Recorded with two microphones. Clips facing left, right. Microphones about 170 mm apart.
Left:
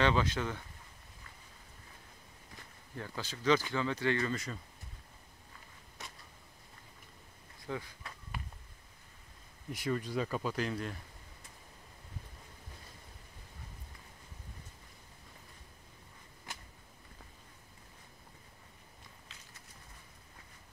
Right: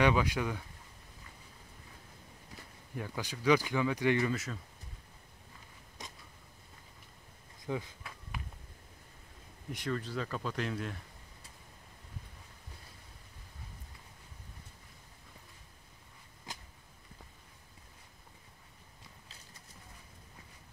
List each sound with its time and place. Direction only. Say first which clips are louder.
0.0 s speech: right 2 dB; 10° right (ahead or behind)
3.0 s speech: right 2 dB; 15° right (ahead or behind)
4.3 s speech: right 2 dB; 5° right (ahead or behind)
7.6 s speech: right 3 dB; 20° right (ahead or behind)
9.7 s speech: left 1 dB; 5° left (ahead or behind)